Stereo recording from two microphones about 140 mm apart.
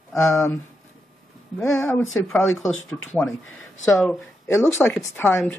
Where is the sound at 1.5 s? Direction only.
5° left (ahead or behind).